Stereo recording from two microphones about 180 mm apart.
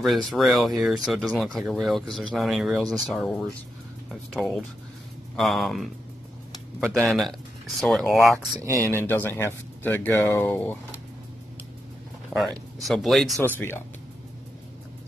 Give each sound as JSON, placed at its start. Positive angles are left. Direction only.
{"t": 0.0, "sound": "speech", "side_deg": 0}
{"t": 8.4, "sound": "speech", "side_deg": -15}
{"t": 8.8, "sound": "speech", "side_deg": 10}
{"t": 12.3, "sound": "speech", "side_deg": 0}
{"t": 13.6, "sound": "speech", "side_deg": 10}